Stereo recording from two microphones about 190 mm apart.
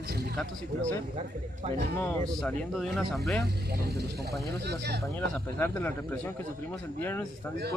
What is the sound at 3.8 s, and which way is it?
Speech, 60° right (ahead or behind).